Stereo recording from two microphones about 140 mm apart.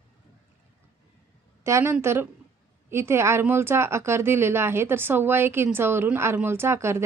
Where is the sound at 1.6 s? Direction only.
20° right (ahead or behind).